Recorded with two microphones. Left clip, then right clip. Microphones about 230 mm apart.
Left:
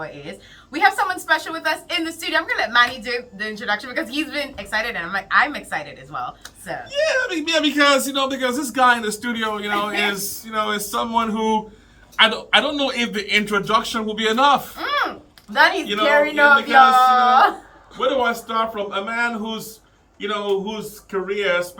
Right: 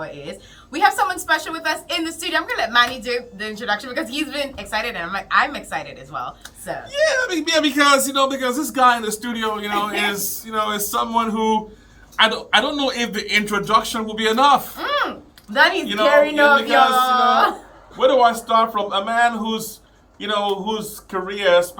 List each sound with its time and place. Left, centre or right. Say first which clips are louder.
0.0 s a woman's voice: right 1 dB; centre
7.0 s a woman's voice: right 2 dB; right; by 14.7 s centre
14.8 s a sound: even; left
15.5 s speech: even; left
17.9 s speech: right 5 dB; centre